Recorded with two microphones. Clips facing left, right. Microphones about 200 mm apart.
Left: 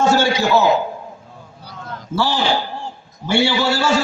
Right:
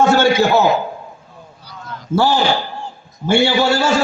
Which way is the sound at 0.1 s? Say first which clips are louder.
Right 4 dB; 55° right (ahead or behind).